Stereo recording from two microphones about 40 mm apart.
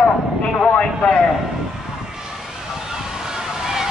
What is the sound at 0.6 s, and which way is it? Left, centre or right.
Speech, left.